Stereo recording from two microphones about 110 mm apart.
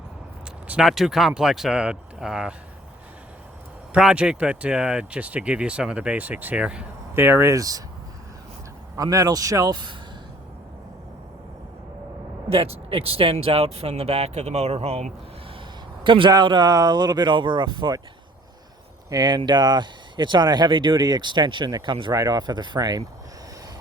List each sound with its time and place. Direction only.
0.7 s speech: 5° right (ahead or behind)
3.9 s speech: 10° right (ahead or behind); by 7.8 s 30° right (ahead or behind)
9.0 s speech: 35° right (ahead or behind)
12.5 s speech: 60° right (ahead or behind)
16.0 s speech: 50° right (ahead or behind)
19.1 s speech: 40° right (ahead or behind)